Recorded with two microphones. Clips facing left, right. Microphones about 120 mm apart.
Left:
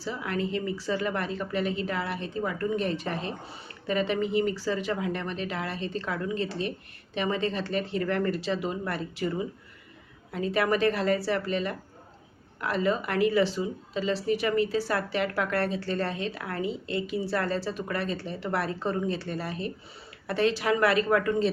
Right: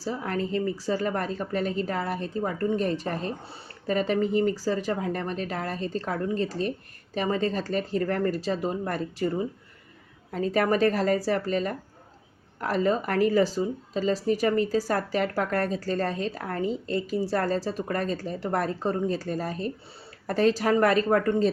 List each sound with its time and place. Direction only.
0.0 s speech: 40° right (ahead or behind)